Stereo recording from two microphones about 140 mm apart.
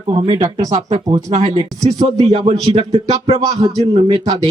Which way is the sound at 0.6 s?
55° right (ahead or behind).